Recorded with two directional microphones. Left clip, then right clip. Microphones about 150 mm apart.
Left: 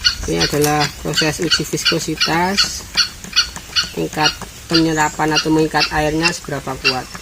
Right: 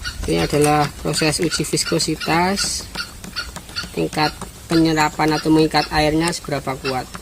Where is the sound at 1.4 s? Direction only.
30° right (ahead or behind).